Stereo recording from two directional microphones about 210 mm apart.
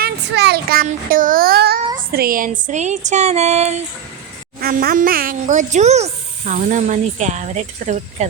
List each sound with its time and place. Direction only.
0.0 s speech: 50° right (ahead or behind); by 3.8 s 30° right (ahead or behind)
4.6 s speech: 45° right (ahead or behind)